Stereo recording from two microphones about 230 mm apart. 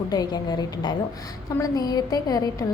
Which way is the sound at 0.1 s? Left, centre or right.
Centre.